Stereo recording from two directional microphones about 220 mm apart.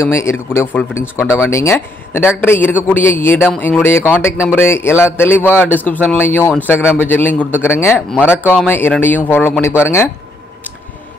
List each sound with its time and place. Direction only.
0.0 s speech: 10° left (ahead or behind)